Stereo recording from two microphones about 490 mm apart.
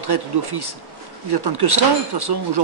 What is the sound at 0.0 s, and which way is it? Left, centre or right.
Speech, right.